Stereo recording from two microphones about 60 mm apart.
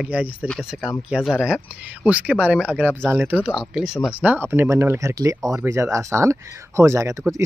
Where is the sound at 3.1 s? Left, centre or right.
Right.